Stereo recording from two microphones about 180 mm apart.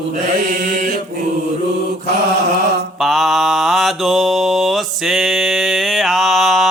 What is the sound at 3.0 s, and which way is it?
Mantra, centre (ahead or behind).